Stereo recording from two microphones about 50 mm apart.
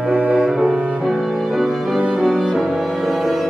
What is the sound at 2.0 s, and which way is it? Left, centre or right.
Music, right.